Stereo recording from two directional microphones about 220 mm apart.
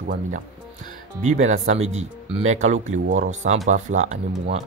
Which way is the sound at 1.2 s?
30° right (ahead or behind).